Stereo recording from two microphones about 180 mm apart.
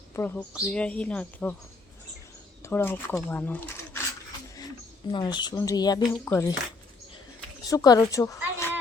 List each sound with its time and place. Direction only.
0.1 s a woman's voice: 10° left (ahead or behind)
2.6 s speech: 15° left (ahead or behind)
5.1 s a woman's voice: 25° left (ahead or behind)
7.7 s a woman's voice: 20° left (ahead or behind)